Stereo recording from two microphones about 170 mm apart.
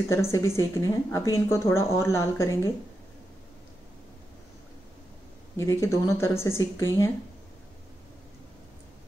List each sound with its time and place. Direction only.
0.1 s speech: 15° left (ahead or behind)
5.6 s speech: 15° left (ahead or behind)